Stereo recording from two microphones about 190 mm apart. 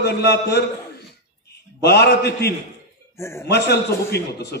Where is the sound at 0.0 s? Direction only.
60° left (ahead or behind).